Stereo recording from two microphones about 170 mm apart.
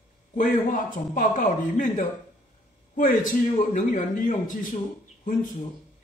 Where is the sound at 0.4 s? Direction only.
50° left (ahead or behind).